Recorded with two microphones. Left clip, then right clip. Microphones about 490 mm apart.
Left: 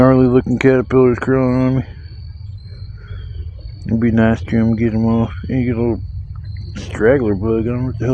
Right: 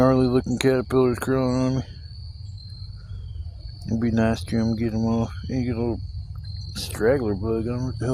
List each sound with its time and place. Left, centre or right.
0.0 s speech: right
3.8 s speech: right